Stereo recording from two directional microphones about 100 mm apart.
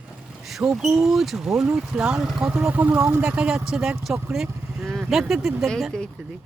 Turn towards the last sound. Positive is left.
turn(degrees=5)  # may be behind; listen again after turning